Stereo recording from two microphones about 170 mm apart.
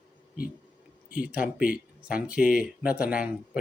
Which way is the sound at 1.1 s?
5° right (ahead or behind).